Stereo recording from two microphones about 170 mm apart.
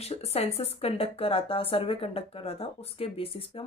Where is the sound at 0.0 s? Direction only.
40° left (ahead or behind).